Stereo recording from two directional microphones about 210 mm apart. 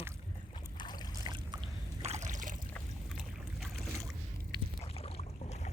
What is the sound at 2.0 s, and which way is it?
Trickle, 30° right (ahead or behind).